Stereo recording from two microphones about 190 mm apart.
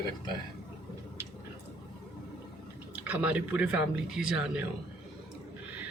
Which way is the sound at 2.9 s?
5° right (ahead or behind).